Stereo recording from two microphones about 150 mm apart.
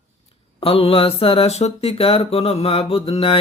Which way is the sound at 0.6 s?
40° left (ahead or behind).